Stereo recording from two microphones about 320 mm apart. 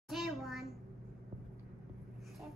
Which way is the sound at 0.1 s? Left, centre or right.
Centre.